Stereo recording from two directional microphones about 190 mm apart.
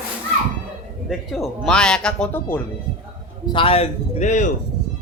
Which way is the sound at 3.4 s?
25° left (ahead or behind).